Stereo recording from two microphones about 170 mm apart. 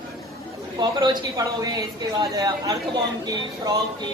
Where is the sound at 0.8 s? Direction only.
25° right (ahead or behind).